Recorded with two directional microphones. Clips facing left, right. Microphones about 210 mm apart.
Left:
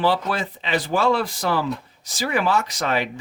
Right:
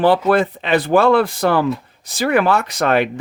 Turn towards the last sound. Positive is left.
turn(degrees=-60)  # may be behind; listen again after turning